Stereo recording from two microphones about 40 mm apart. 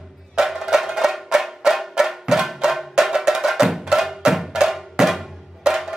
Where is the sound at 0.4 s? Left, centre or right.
Centre.